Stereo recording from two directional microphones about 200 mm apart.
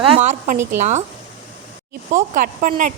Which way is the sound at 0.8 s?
35° right (ahead or behind).